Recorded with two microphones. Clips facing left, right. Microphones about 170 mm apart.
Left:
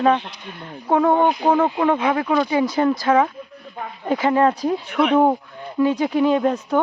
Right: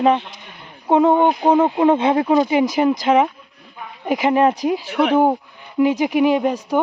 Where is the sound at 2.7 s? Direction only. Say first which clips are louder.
Even; 15° right (ahead or behind).